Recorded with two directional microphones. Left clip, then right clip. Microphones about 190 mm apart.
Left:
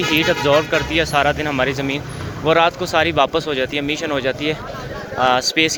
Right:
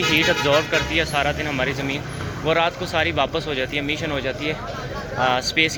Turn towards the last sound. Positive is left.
turn(degrees=35)  # may be behind; listen again after turning